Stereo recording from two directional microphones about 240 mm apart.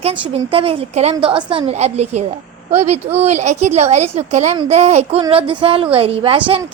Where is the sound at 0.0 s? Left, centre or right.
Right.